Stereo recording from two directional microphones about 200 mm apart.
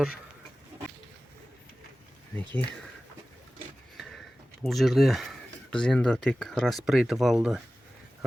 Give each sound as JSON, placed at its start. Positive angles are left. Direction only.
{"t": 2.4, "sound": "speech", "side_deg": -25}
{"t": 3.9, "sound": "a sound", "side_deg": 0}
{"t": 4.6, "sound": "speech", "side_deg": 0}